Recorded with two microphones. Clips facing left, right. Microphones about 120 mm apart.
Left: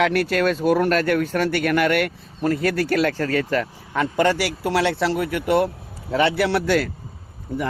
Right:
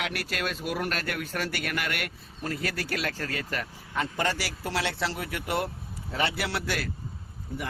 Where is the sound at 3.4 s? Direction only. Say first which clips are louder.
Left 11 dB; 70° left (ahead or behind).